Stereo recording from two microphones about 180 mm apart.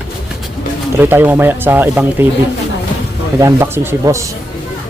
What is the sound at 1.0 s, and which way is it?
Speech, 10° right (ahead or behind).